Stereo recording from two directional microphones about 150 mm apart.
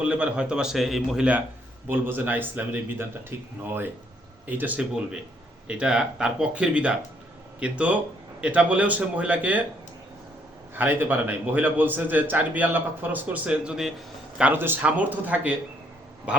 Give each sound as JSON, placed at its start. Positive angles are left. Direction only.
{"t": 0.0, "sound": "a man's voice", "side_deg": -10}
{"t": 10.8, "sound": "a man's voice", "side_deg": -10}